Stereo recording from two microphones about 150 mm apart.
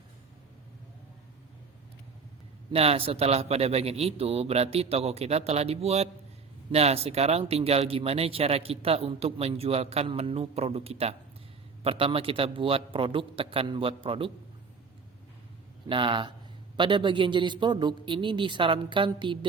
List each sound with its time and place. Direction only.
2.7 s a man's voice: 40° right (ahead or behind)
15.9 s speech: 35° right (ahead or behind)